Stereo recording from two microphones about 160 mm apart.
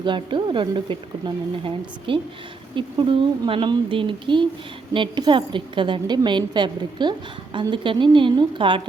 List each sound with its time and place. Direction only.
0.0 s a woman's voice: 30° right (ahead or behind)